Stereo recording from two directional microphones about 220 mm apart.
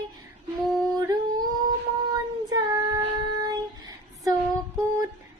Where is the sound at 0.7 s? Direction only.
15° right (ahead or behind).